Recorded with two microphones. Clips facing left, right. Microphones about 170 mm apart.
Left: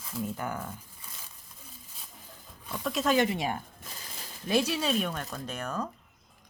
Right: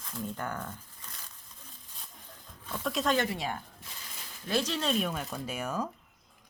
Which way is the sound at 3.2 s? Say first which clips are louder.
Left 4 dB; 15° left (ahead or behind).